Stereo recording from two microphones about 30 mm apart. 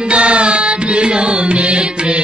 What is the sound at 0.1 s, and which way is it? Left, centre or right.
Music, right.